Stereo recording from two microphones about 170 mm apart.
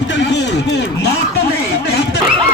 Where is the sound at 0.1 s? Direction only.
90° left.